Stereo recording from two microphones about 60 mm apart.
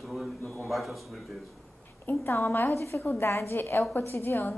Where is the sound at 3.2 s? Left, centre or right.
Left.